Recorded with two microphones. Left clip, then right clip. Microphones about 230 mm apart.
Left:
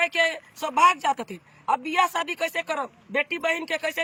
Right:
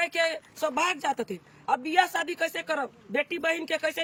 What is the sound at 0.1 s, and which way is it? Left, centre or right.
Speech, centre.